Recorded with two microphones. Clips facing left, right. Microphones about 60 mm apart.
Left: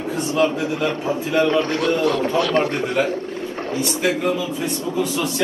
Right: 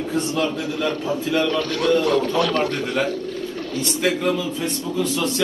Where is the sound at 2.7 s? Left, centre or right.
Left.